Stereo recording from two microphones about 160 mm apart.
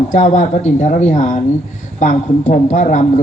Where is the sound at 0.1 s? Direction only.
50° left (ahead or behind).